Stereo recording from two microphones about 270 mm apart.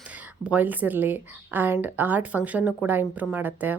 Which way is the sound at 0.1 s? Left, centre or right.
Centre.